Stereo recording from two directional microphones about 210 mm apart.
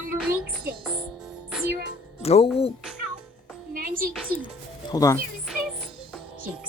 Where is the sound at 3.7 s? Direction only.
40° right (ahead or behind).